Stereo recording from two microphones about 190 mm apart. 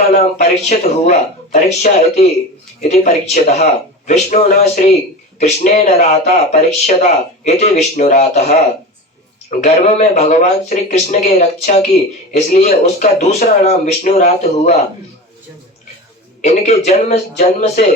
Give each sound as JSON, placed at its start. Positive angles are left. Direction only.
{"t": 0.2, "sound": "speech", "side_deg": 35}
{"t": 16.4, "sound": "speech", "side_deg": 35}